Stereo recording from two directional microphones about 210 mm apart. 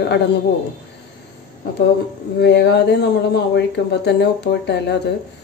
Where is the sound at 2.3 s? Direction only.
55° left (ahead or behind).